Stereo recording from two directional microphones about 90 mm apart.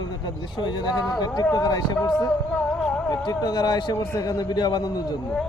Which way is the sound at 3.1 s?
50° left (ahead or behind).